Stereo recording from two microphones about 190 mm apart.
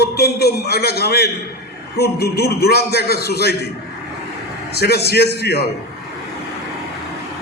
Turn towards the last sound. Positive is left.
turn(degrees=55)  # may be behind; listen again after turning